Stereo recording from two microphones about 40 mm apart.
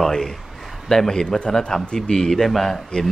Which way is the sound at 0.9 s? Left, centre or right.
Centre.